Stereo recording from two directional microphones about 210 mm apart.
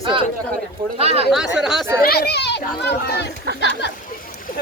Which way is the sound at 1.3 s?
Centre (ahead or behind).